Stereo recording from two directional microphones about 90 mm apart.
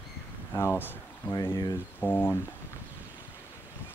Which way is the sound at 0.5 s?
25° left (ahead or behind).